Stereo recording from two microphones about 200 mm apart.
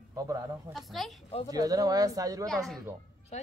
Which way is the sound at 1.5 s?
20° right (ahead or behind).